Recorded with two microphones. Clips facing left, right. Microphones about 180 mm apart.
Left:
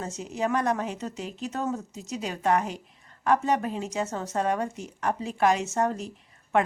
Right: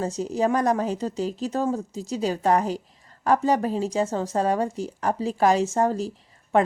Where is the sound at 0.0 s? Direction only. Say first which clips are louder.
Right 6 dB; 35° right (ahead or behind).